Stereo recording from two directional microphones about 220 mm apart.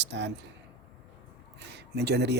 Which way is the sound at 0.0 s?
50° right (ahead or behind).